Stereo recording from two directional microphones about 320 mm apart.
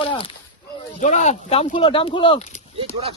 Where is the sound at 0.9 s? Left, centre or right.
Left.